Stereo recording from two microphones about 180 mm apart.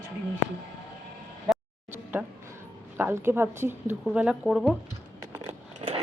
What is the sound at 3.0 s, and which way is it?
Speech, 15° right (ahead or behind).